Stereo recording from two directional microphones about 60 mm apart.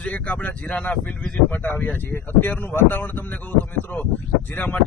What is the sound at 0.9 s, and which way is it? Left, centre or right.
Speech, centre.